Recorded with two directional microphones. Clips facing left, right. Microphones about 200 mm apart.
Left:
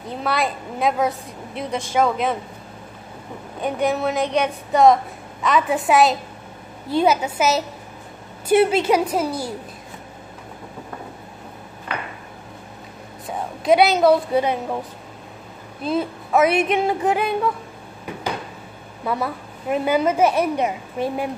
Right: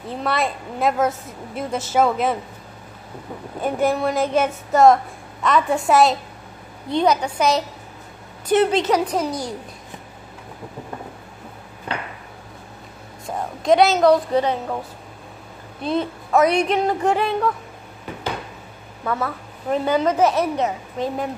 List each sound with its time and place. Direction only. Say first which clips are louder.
0.1 s a woman's voice: even; centre (ahead or behind)
3.6 s a woman's voice: right 1 dB; centre (ahead or behind)
13.3 s a woman's voice: even; 5° left (ahead or behind)
15.8 s a woman's voice: even; 5° left (ahead or behind)
19.0 s a woman's voice: even; 10° left (ahead or behind)